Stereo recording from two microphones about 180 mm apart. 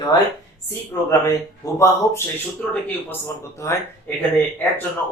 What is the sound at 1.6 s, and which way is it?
Speech, 15° left (ahead or behind).